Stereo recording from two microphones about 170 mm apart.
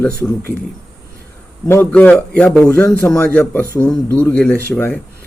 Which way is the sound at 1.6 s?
10° left (ahead or behind).